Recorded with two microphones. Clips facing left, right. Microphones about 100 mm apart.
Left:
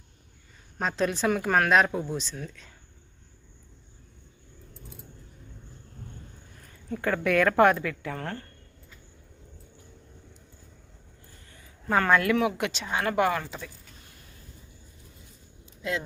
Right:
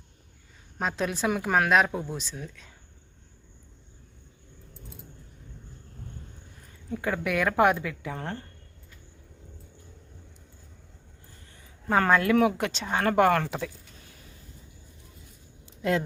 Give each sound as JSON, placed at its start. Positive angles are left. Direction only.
{"t": 0.8, "sound": "speech", "side_deg": -5}
{"t": 6.9, "sound": "speech", "side_deg": -15}
{"t": 11.9, "sound": "speech", "side_deg": -30}
{"t": 12.4, "sound": "speech", "side_deg": -40}
{"t": 13.4, "sound": "speech", "side_deg": -80}
{"t": 15.8, "sound": "speech", "side_deg": -50}